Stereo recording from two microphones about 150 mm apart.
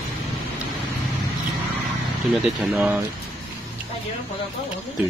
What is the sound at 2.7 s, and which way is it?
Speech, 15° right (ahead or behind).